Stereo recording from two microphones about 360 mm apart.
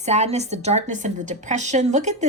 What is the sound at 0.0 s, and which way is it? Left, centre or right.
A woman's voice, centre.